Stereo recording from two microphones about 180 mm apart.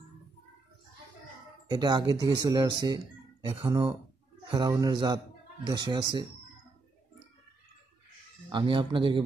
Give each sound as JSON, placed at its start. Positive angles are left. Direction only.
{"t": 1.7, "sound": "a man's voice", "side_deg": -25}
{"t": 8.5, "sound": "a man's voice", "side_deg": -25}